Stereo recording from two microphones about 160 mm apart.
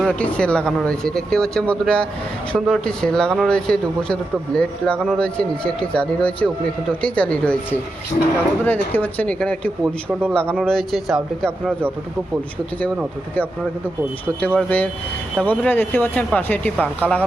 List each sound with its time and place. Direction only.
0.0 s speech: 5° left (ahead or behind)
8.1 s speech: 50° left (ahead or behind)
8.6 s speech: 10° left (ahead or behind)
14.4 s speech: 10° left (ahead or behind)